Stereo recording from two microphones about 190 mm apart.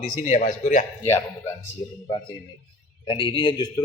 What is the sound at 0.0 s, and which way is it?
Speech, 45° left (ahead or behind).